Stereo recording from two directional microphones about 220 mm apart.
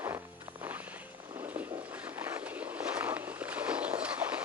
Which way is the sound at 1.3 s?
5° right (ahead or behind).